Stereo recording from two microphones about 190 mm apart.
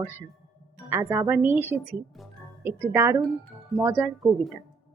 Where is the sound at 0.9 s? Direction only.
15° right (ahead or behind).